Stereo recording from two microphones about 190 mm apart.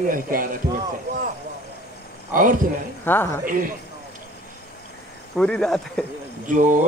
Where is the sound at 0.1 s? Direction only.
45° right (ahead or behind).